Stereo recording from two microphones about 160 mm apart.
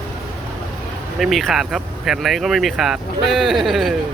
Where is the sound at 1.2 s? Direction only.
Centre (ahead or behind).